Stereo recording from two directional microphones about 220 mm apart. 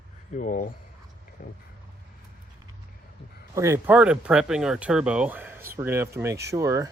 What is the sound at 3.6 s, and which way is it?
Speech, 10° right (ahead or behind).